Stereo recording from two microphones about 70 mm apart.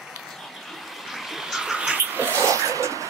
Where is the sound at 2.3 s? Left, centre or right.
Right.